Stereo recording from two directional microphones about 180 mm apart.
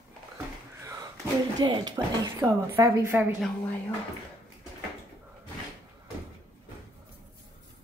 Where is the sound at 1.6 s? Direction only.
25° right (ahead or behind).